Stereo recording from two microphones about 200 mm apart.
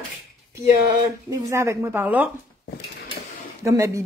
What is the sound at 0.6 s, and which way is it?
A woman's voice, 15° right (ahead or behind).